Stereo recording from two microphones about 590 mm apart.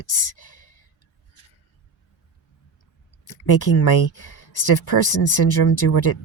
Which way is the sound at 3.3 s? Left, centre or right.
Left.